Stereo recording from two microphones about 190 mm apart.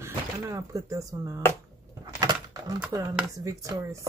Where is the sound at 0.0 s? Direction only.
15° right (ahead or behind).